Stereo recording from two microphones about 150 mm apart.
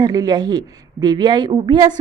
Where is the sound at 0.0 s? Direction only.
25° right (ahead or behind).